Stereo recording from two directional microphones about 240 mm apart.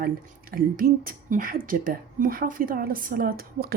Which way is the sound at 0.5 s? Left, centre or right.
Right.